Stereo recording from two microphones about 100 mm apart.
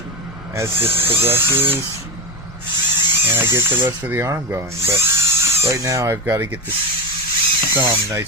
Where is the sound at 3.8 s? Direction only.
20° right (ahead or behind).